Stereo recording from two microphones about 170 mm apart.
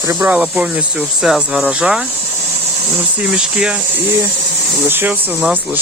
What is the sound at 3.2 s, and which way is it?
Speech, 5° right (ahead or behind).